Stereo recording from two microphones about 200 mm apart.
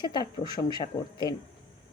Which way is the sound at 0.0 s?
20° left (ahead or behind).